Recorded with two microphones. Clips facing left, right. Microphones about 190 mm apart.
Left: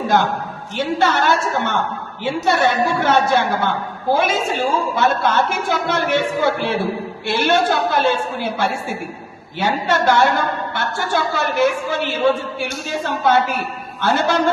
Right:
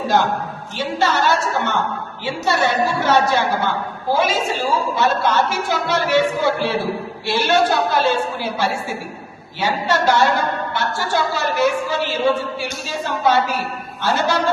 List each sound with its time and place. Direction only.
0.8 s a woman's voice: 55° left (ahead or behind)